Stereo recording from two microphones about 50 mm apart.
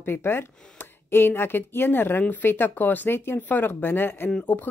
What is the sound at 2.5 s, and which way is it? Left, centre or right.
Speech, left.